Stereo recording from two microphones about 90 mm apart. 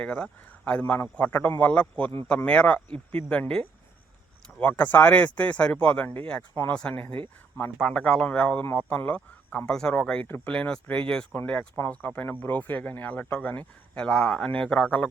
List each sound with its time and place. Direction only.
0.0 s speech: 15° left (ahead or behind)
4.8 s speech: 20° left (ahead or behind)
8.6 s speech: 25° left (ahead or behind)
10.2 s speech: 25° left (ahead or behind)
10.5 s speech: 10° left (ahead or behind)